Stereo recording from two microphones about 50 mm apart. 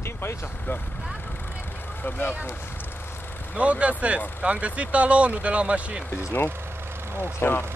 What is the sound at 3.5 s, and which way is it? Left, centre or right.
Speech, right.